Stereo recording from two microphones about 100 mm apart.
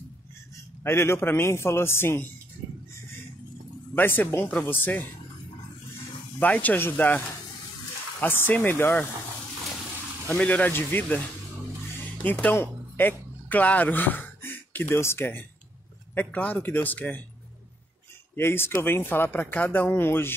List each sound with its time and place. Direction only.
0.8 s a man's voice: 25° left (ahead or behind)
3.9 s a man's voice: 20° left (ahead or behind)
6.4 s a man's voice: 15° left (ahead or behind)
10.2 s speech: 15° left (ahead or behind)
12.2 s speech: 15° left (ahead or behind)
18.3 s a man's voice: 20° left (ahead or behind)